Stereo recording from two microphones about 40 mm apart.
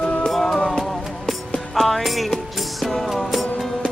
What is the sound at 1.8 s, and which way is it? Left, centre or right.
Music, centre.